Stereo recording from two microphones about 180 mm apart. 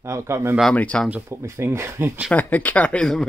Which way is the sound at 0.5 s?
5° left (ahead or behind).